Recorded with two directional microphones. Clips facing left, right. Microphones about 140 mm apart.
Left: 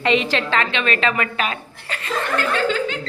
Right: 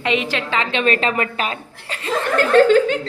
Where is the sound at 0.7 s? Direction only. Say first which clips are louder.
Right 2 dB; 40° right (ahead or behind).